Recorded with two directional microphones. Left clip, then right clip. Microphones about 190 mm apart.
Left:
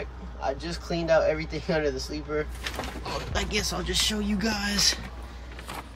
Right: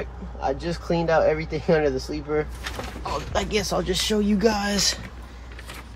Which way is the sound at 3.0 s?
5° right (ahead or behind).